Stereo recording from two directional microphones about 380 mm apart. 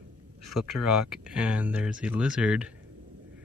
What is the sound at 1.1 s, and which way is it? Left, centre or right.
Speech, centre.